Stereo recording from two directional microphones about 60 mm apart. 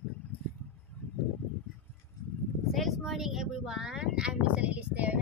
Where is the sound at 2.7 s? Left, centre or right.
Centre.